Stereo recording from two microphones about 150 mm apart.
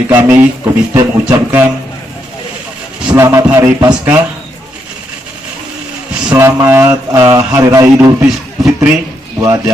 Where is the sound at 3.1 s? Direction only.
20° right (ahead or behind).